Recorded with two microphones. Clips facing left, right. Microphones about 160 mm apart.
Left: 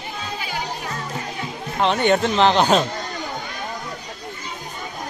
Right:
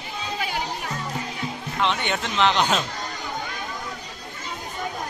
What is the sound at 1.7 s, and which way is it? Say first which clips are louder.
Speech: left 8 dB; 40° left (ahead or behind).